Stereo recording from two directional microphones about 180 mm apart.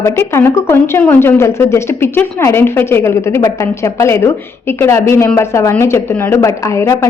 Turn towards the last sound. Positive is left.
turn(degrees=15)  # may be behind; listen again after turning